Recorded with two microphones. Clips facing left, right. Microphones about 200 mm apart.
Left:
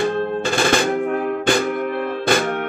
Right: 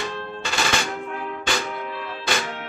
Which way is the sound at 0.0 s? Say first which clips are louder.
Left 11 dB; 55° left (ahead or behind).